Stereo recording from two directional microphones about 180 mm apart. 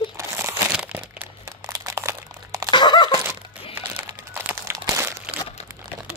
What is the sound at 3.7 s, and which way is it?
Crumpling, 15° right (ahead or behind).